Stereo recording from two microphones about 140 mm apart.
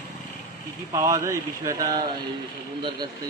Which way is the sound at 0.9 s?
20° right (ahead or behind).